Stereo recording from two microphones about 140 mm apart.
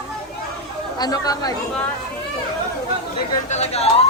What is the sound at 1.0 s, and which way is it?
Speech, 30° left (ahead or behind).